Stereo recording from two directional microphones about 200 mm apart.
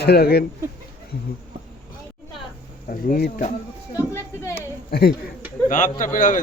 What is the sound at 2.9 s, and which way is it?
Speech, 45° left (ahead or behind).